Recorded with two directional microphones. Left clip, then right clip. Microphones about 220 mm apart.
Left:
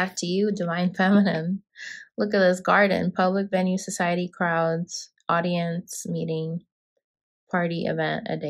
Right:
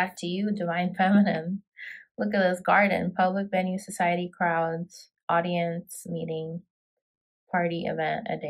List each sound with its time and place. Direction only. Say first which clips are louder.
0.0 s speech: left 4 dB; 25° left (ahead or behind)
7.5 s speech: left 2 dB; 20° left (ahead or behind)